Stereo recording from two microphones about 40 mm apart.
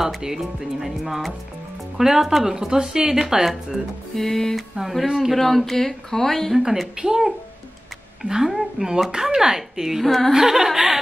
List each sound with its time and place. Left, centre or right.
0.2 s speech: centre
4.1 s speech: centre
4.7 s speech: centre
5.3 s speech: centre
6.5 s speech: centre
10.0 s speech: centre
10.3 s speech: centre